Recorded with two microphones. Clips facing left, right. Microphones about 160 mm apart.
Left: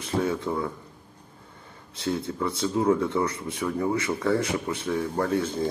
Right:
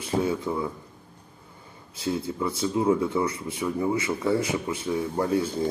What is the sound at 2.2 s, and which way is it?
Speech, 5° right (ahead or behind).